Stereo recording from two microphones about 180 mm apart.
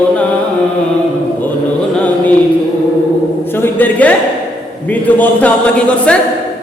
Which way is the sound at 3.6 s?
10° left (ahead or behind).